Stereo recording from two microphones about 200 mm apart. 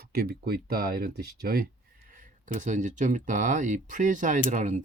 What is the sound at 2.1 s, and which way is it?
Speech, 40° right (ahead or behind).